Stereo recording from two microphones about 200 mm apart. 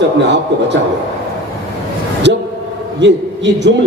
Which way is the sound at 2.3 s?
60° right (ahead or behind).